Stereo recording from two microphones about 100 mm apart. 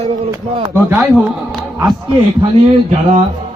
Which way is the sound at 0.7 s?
15° right (ahead or behind).